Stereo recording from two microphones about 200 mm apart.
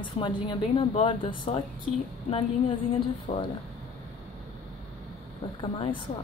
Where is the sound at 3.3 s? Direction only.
25° left (ahead or behind).